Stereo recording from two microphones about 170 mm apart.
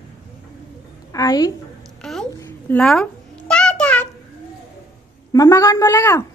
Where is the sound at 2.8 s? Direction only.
5° left (ahead or behind).